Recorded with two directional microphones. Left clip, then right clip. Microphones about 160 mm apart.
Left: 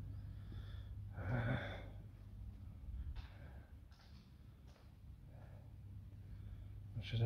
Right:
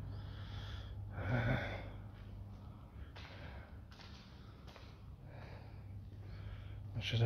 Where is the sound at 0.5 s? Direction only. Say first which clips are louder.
Right 8 dB; 5° right (ahead or behind).